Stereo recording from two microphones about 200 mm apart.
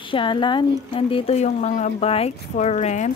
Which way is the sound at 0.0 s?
25° left (ahead or behind).